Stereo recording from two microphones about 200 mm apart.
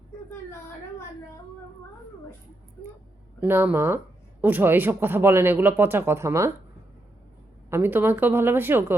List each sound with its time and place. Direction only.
3.4 s speech: 10° right (ahead or behind)
7.7 s speech: 10° right (ahead or behind)